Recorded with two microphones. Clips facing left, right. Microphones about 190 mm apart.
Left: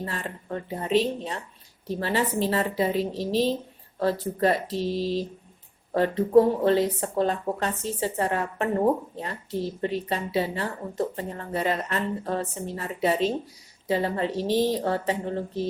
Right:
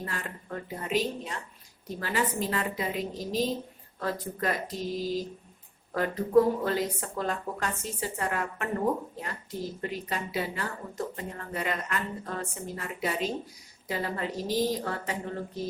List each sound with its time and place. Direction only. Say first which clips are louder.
0.0 s a woman's voice: left 4 dB; 30° left (ahead or behind)